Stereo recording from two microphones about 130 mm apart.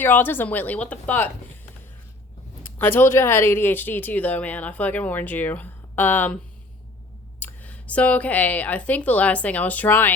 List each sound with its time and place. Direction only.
0.0 s speech: 15° left (ahead or behind)
2.7 s speech: 15° left (ahead or behind)